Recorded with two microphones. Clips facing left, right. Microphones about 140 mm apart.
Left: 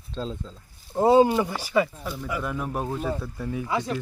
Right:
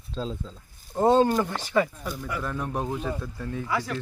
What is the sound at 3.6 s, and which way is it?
Speech, 20° left (ahead or behind).